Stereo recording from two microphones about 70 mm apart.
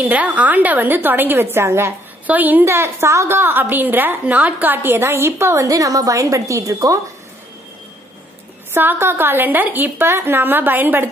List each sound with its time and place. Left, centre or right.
0.0 s a woman's voice: right
2.2 s a woman's voice: right
2.6 s a woman's voice: right
5.0 s a woman's voice: right
5.7 s a woman's voice: right
6.7 s speech: right
8.7 s a woman's voice: right